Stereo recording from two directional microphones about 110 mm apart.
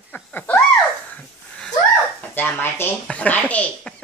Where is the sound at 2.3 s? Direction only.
20° left (ahead or behind).